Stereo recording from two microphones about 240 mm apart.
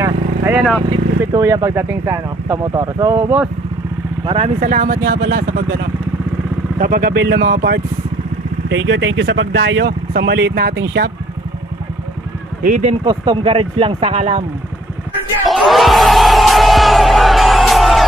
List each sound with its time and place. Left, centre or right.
0.0 s a sound: centre
0.8 s speech: centre
4.6 s speech: right
12.6 s speech: right
13.0 s speech: centre
15.4 s music: centre